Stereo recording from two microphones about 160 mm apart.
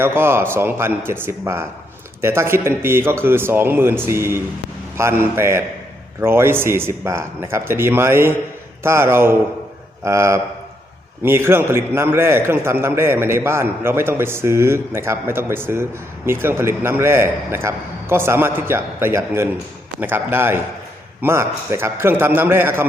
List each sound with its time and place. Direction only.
0.0 s a man's voice: 15° right (ahead or behind)